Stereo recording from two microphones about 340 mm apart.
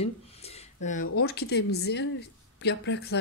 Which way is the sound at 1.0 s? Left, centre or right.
Left.